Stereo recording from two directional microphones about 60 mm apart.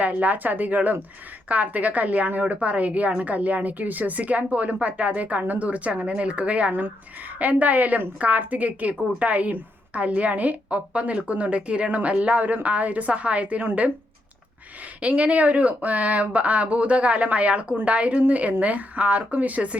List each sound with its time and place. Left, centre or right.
0.0 s a woman's voice: right
15.0 s a woman's voice: right